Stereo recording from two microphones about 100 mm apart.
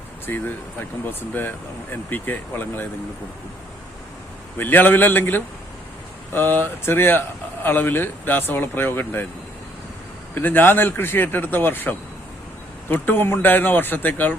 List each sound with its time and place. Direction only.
0.3 s speech: 20° left (ahead or behind)
4.5 s speech: 20° left (ahead or behind)
10.3 s speech: 20° left (ahead or behind)